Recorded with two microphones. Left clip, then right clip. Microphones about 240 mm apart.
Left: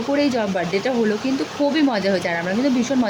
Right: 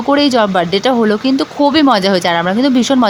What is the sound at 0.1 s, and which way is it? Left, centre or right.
Speech, right.